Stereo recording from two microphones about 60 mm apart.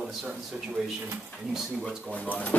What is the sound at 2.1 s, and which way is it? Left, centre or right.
Speech, left.